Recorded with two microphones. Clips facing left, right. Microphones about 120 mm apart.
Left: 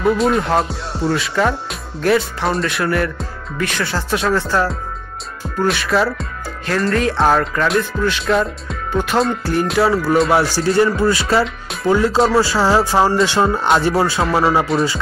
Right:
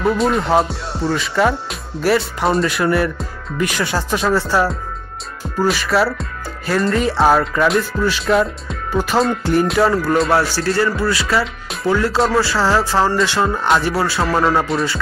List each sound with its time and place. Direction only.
0.0 s speech: centre (ahead or behind)
11.0 s speech: 25° left (ahead or behind)
11.4 s music: centre (ahead or behind)
11.9 s speech: 15° left (ahead or behind)
14.2 s speech: centre (ahead or behind)